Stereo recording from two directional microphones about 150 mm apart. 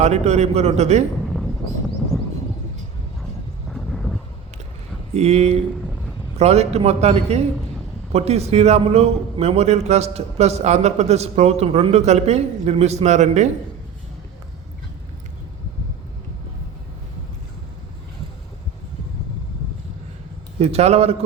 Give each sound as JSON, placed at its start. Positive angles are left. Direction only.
{"t": 0.0, "sound": "a man's voice", "side_deg": -45}
{"t": 3.7, "sound": "vehicle", "side_deg": 0}
{"t": 5.1, "sound": "a man's voice", "side_deg": -45}
{"t": 20.6, "sound": "a man's voice", "side_deg": -45}